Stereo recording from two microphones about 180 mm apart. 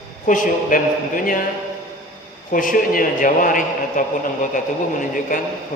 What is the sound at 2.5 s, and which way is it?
A man's voice, 50° left (ahead or behind).